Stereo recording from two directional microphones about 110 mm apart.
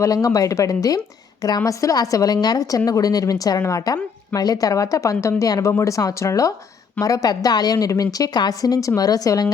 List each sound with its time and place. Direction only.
0.0 s a woman's voice: 30° left (ahead or behind)